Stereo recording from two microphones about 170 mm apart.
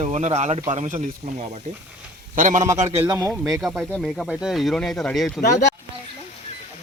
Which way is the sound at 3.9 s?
Centre (ahead or behind).